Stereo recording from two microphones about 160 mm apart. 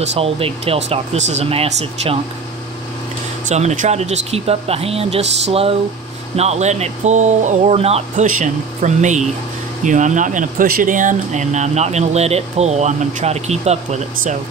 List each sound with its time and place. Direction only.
0.0 s speech: 40° right (ahead or behind)
3.4 s speech: 45° right (ahead or behind)